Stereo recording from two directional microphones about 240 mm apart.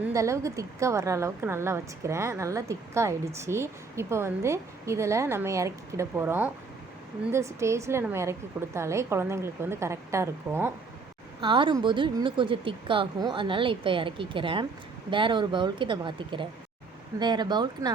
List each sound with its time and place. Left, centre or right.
0.0 s a woman's voice: centre